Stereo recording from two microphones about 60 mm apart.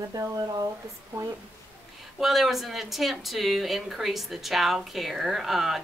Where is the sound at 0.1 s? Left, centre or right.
Right.